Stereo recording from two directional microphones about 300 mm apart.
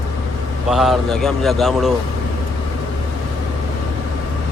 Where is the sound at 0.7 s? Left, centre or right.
Centre.